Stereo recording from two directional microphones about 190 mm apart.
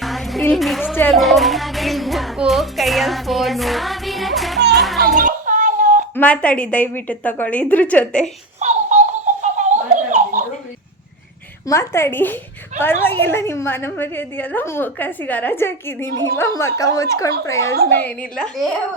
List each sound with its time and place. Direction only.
0.0 s music: centre (ahead or behind)
0.5 s a woman's voice: centre (ahead or behind)
4.7 s children playing: centre (ahead or behind)
5.2 s a sound: 40° right (ahead or behind)
6.1 s a woman's voice: 5° left (ahead or behind)
8.5 s a sound: 35° right (ahead or behind)
11.6 s a woman's voice: 15° left (ahead or behind)
18.0 s a woman's voice: 5° left (ahead or behind)